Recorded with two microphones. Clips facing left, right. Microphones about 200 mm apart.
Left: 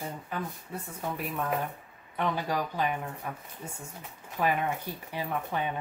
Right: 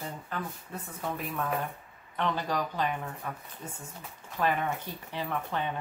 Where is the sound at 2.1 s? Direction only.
10° left (ahead or behind).